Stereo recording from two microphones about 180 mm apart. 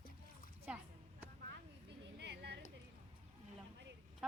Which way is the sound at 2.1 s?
70° right (ahead or behind).